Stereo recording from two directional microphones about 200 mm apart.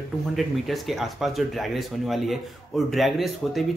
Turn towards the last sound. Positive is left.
turn(degrees=0)  # may be behind; listen again after turning